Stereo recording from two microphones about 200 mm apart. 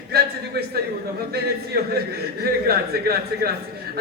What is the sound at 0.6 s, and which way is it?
A man's voice, 50° right (ahead or behind).